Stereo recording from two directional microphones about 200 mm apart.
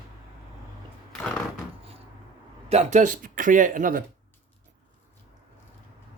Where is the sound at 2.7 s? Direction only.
35° right (ahead or behind).